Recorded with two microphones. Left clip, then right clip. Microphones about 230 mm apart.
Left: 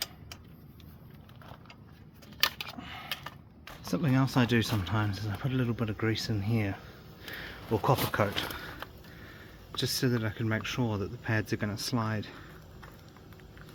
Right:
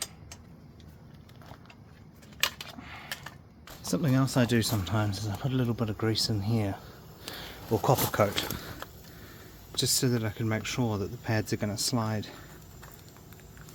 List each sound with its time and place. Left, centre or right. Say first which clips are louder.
2.7 s a sound: left 1 dB; left
3.8 s speech: right 1 dB; centre
9.7 s speech: right 2 dB; centre